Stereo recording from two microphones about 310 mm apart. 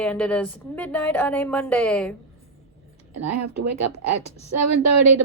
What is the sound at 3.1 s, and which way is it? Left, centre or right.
Speech, right.